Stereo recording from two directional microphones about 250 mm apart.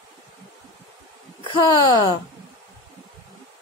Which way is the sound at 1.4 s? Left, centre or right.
Centre.